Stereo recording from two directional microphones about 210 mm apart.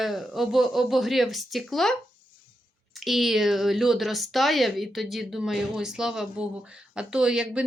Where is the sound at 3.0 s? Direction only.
Centre (ahead or behind).